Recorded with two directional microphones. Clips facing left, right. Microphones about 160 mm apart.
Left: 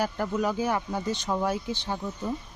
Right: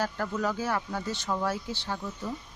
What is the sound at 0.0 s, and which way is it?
Speech, 15° left (ahead or behind).